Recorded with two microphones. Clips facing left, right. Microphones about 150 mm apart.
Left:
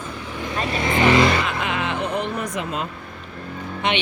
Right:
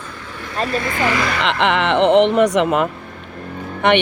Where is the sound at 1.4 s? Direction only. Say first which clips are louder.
Right 7 dB; 80° right.